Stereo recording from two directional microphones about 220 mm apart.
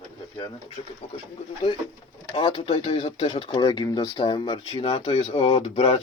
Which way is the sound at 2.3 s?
25° left (ahead or behind).